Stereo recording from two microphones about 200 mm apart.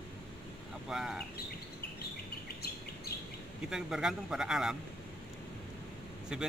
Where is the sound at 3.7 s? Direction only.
Centre (ahead or behind).